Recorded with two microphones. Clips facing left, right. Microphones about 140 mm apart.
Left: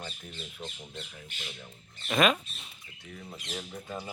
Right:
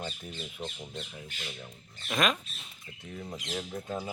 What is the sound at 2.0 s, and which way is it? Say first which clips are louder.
Speech: left 4 dB; 5° left (ahead or behind).